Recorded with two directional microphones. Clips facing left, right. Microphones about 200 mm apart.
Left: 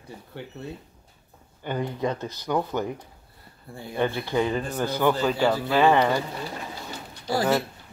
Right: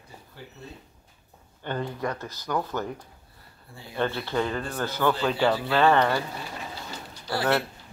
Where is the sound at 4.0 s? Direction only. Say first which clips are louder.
Left 2 dB; 15° left (ahead or behind).